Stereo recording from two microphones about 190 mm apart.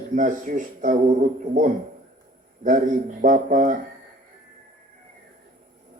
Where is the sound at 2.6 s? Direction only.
45° right (ahead or behind).